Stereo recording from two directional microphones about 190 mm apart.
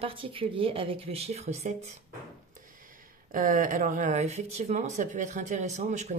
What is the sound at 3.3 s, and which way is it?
Speech, 45° right (ahead or behind).